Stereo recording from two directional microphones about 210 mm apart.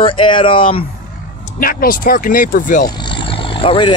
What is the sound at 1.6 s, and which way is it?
Speech, 45° left (ahead or behind).